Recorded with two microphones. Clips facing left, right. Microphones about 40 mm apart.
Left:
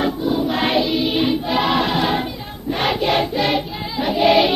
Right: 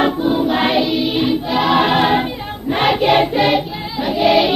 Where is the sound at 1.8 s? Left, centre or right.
Right.